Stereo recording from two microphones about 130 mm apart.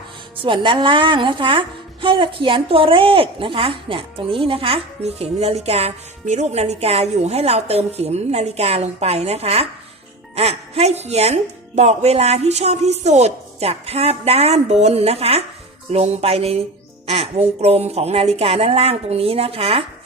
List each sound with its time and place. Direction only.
0.4 s a woman's voice: 40° right (ahead or behind)